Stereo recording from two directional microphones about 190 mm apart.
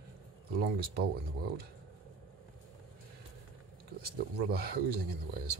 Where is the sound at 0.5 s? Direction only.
55° right (ahead or behind).